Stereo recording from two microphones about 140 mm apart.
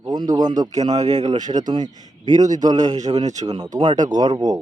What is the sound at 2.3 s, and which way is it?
Speech, 60° right (ahead or behind).